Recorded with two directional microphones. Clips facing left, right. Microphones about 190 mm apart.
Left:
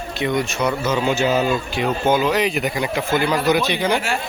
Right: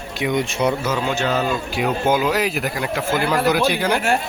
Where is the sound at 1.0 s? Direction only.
5° left (ahead or behind).